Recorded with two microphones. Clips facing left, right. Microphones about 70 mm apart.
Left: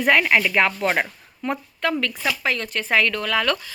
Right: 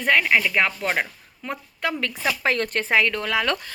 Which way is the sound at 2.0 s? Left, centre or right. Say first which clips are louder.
Even; right.